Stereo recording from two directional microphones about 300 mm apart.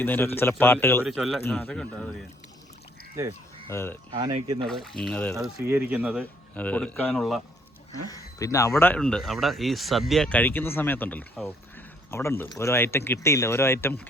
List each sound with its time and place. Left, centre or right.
0.0 s speech: centre
3.7 s speech: centre
4.1 s speech: centre
4.6 s speech: centre
5.5 s speech: centre
6.5 s speech: centre
8.1 s speech: centre